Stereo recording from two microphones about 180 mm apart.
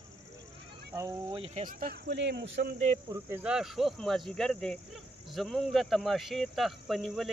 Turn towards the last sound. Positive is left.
turn(degrees=0)  # may be behind; listen again after turning